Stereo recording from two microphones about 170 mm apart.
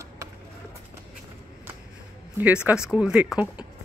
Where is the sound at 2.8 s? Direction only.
5° right (ahead or behind).